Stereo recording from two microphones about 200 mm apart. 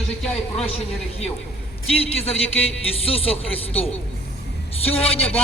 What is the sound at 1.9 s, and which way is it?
Speech, 30° left (ahead or behind).